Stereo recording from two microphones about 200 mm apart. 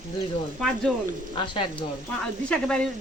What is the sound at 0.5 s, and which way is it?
Speech, centre (ahead or behind).